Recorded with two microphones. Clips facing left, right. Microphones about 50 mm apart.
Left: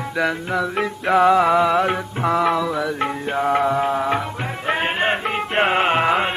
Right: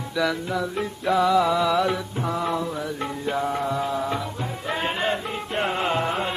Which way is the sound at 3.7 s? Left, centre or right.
Left.